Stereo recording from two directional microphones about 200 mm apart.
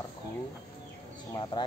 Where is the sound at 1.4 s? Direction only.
20° left (ahead or behind).